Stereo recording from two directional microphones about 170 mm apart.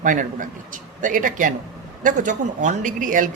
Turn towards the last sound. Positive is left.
turn(degrees=-50)  # may be behind; listen again after turning